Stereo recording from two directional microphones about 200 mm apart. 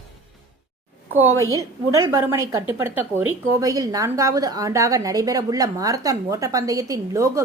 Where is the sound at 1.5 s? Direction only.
15° right (ahead or behind).